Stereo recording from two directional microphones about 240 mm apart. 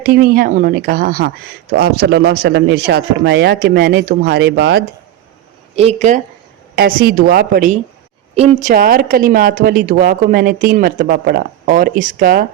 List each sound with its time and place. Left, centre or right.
0.0 s a woman's voice: right
5.7 s speech: right
6.7 s a woman's voice: right